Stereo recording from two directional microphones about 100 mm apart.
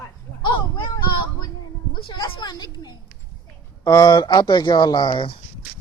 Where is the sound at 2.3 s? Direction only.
45° left (ahead or behind).